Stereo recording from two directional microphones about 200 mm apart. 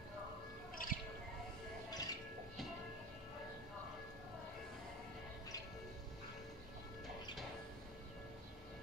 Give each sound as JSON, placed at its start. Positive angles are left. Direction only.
{"t": 0.8, "sound": "music", "side_deg": 45}
{"t": 1.9, "sound": "music", "side_deg": 20}